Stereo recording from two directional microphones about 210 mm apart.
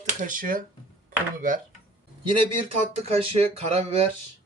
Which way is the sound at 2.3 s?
25° right (ahead or behind).